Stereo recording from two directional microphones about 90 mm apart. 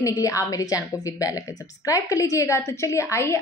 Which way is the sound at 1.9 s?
40° left (ahead or behind).